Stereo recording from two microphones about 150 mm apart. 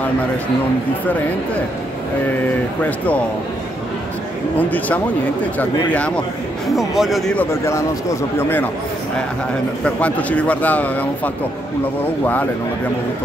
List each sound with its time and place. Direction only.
4.6 s a man's voice: 10° left (ahead or behind)
7.3 s a man's voice: 20° left (ahead or behind)
9.8 s a man's voice: 10° left (ahead or behind)